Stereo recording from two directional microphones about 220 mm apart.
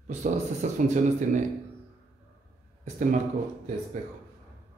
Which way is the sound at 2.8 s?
35° right (ahead or behind).